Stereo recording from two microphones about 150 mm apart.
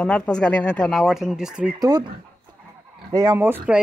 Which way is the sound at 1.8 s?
25° right (ahead or behind).